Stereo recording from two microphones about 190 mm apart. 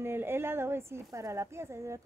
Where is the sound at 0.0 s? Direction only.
10° right (ahead or behind).